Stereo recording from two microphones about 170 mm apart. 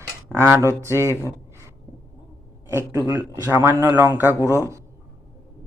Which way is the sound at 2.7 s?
15° right (ahead or behind).